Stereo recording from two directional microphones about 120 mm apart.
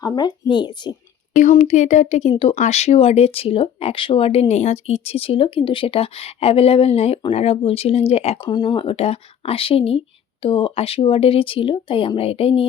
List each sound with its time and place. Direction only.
0.0 s speech: 35° left (ahead or behind)
1.4 s speech: 85° left
2.3 s speech: 55° left (ahead or behind)
2.6 s speech: 65° left (ahead or behind)
8.4 s speech: 40° left (ahead or behind)